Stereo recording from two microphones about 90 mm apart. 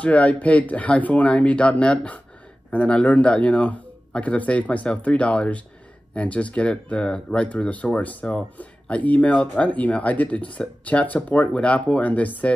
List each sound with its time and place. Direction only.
0.0 s speech: 15° left (ahead or behind)